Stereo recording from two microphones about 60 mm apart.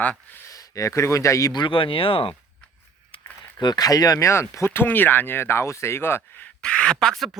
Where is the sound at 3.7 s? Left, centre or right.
Left.